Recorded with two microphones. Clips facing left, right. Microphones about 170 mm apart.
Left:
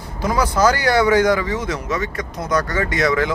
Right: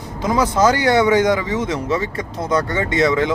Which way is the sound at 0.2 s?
20° right (ahead or behind).